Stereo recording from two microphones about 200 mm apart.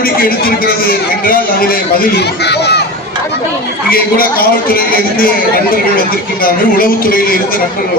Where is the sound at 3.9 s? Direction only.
45° left (ahead or behind).